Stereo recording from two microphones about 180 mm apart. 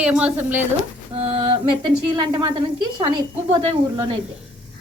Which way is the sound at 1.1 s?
30° right (ahead or behind).